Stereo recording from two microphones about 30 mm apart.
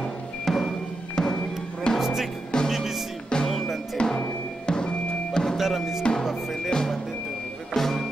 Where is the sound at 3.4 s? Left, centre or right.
Centre.